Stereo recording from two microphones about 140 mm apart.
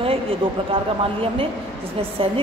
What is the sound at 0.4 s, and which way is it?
Speech, 35° right (ahead or behind).